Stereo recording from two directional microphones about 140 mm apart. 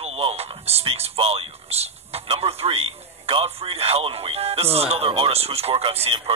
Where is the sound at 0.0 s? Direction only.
45° right (ahead or behind).